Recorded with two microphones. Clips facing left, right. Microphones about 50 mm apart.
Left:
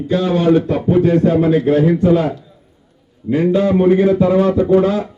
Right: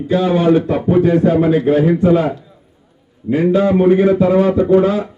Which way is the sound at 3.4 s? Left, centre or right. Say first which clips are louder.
Right 1 dB; centre.